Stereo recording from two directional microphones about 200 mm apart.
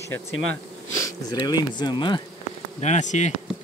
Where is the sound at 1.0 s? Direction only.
20° left (ahead or behind).